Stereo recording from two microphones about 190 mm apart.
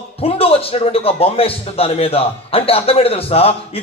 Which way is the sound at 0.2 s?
30° left (ahead or behind).